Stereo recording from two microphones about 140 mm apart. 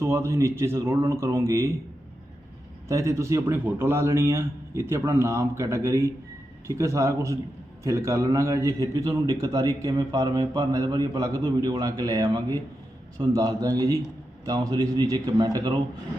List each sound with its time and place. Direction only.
0.0 s a man's voice: 20° right (ahead or behind)
2.9 s a man's voice: 20° right (ahead or behind)